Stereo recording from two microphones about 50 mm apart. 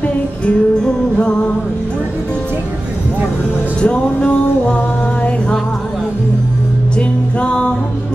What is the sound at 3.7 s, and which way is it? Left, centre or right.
Music, centre.